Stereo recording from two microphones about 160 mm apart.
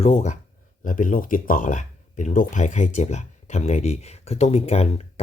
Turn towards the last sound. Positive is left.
turn(degrees=40)  # may be behind; listen again after turning